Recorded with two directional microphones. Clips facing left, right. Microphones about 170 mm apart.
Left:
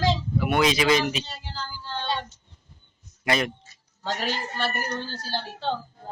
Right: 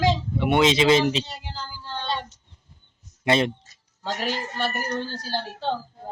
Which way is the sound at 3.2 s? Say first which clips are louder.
Right 4 dB; 25° right (ahead or behind).